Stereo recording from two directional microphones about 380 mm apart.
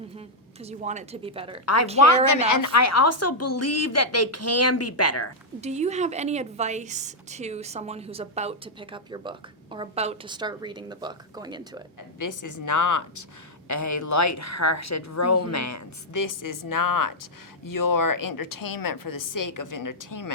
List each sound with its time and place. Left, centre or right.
0.6 s a woman's voice: centre
1.6 s a woman's voice: left
5.5 s a woman's voice: centre
12.2 s a woman's voice: left